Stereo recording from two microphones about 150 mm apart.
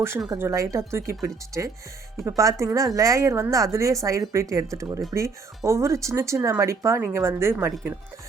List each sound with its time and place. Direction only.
0.3 s speech: 20° right (ahead or behind)